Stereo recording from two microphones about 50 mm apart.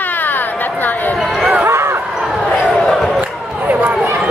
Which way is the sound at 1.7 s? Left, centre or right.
Right.